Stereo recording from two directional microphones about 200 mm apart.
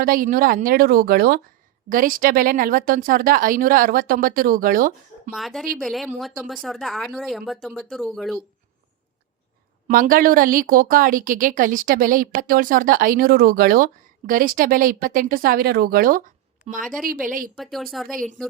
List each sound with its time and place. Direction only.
0.0 s a woman's voice: 45° right (ahead or behind)
5.3 s speech: centre (ahead or behind)
9.8 s a woman's voice: 45° right (ahead or behind)
16.8 s speech: centre (ahead or behind)
17.2 s a woman's voice: 45° right (ahead or behind)
17.6 s speech: centre (ahead or behind)